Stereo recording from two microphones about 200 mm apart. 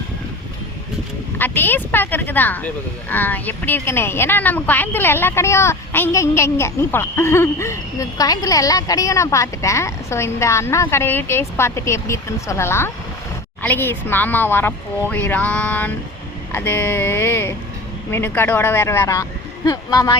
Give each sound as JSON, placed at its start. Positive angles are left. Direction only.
{"t": 1.4, "sound": "speech", "side_deg": 10}